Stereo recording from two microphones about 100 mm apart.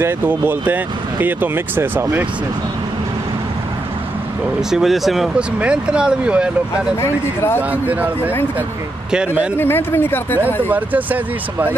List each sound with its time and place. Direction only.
0.0 s speech: 20° right (ahead or behind)
4.6 s speech: 5° right (ahead or behind)
7.0 s speech: 25° left (ahead or behind)
7.7 s speech: 15° right (ahead or behind)
9.1 s speech: 10° right (ahead or behind)
9.6 s speech: 20° left (ahead or behind)
10.4 s speech: 15° right (ahead or behind)